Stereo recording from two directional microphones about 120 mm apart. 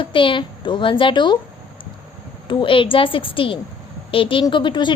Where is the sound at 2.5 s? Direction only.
45° left (ahead or behind).